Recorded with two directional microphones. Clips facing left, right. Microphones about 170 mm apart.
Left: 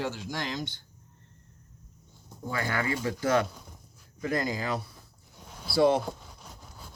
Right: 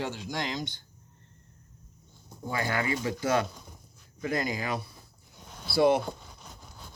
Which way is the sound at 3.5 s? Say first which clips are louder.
Even; 10° left (ahead or behind).